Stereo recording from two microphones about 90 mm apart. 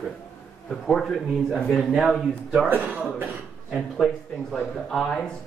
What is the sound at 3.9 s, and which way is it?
Speech, 5° left (ahead or behind).